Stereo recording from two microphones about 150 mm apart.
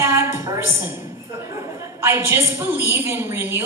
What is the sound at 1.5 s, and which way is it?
A woman's voice, 20° right (ahead or behind).